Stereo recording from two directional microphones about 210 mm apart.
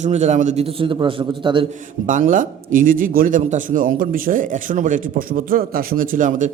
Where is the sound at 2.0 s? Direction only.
40° right (ahead or behind).